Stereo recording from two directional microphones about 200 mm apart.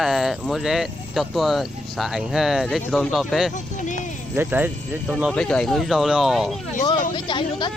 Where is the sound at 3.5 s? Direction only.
40° left (ahead or behind).